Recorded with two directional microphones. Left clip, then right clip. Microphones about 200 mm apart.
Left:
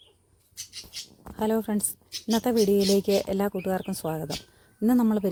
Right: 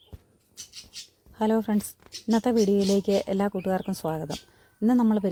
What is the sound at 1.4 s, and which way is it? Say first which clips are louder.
A woman's voice: right 1 dB; centre (ahead or behind).